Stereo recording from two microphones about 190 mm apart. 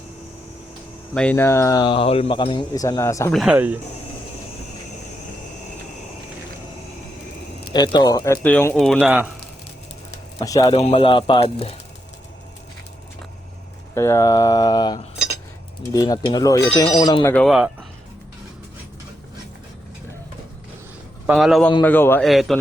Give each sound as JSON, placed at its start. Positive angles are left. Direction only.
{"t": 1.1, "sound": "speech", "side_deg": 5}
{"t": 3.3, "sound": "speech", "side_deg": -5}
{"t": 7.7, "sound": "speech", "side_deg": 20}
{"t": 8.4, "sound": "speech", "side_deg": 5}
{"t": 9.0, "sound": "speech", "side_deg": -5}
{"t": 10.4, "sound": "speech", "side_deg": 20}
{"t": 10.8, "sound": "speech", "side_deg": 30}
{"t": 13.9, "sound": "speech", "side_deg": 15}
{"t": 17.3, "sound": "a man's voice", "side_deg": 0}
{"t": 21.2, "sound": "a man's voice", "side_deg": 0}
{"t": 21.8, "sound": "speech", "side_deg": 10}
{"t": 22.2, "sound": "a man's voice", "side_deg": 0}